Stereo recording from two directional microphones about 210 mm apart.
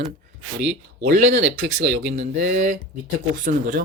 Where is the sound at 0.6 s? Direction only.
60° right (ahead or behind).